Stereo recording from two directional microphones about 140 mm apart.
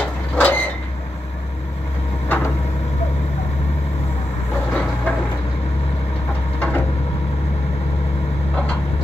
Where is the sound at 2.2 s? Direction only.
15° left (ahead or behind).